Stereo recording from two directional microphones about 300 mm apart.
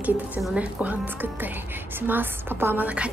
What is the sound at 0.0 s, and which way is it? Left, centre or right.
Speech, centre.